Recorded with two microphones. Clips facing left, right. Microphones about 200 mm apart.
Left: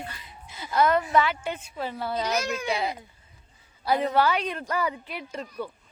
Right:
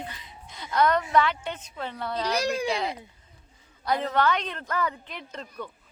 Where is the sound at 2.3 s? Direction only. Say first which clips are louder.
Right 2 dB; 35° right (ahead or behind).